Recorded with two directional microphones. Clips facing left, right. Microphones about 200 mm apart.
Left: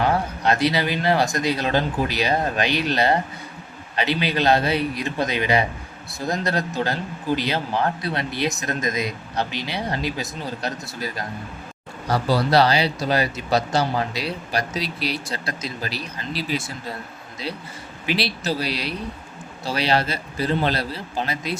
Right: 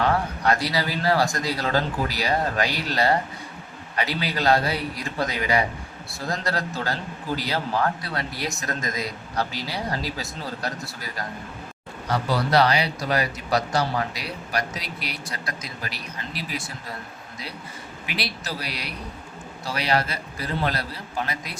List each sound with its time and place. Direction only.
0.0 s speech: 25° left (ahead or behind)
12.0 s speech: 35° left (ahead or behind)
18.0 s speech: 30° left (ahead or behind)